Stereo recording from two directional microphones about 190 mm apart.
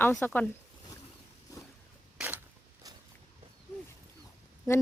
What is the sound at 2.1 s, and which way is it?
Creak, 10° right (ahead or behind).